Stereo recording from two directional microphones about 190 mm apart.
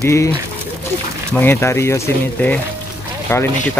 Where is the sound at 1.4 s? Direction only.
15° left (ahead or behind).